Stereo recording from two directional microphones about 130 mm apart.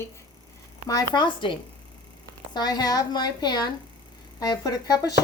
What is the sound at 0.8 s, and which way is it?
A woman's voice, 35° left (ahead or behind).